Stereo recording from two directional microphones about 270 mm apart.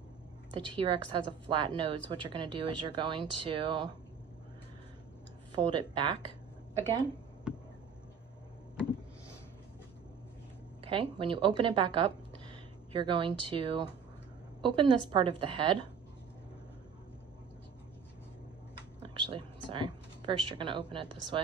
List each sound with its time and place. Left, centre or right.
0.5 s a woman's voice: centre
5.5 s speech: centre
7.5 s a sound: centre
10.8 s a woman's voice: centre
19.3 s speech: centre